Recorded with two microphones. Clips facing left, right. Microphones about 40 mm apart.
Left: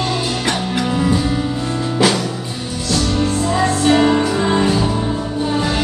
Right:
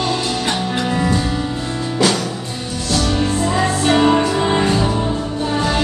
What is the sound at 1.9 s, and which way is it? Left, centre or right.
Music, centre.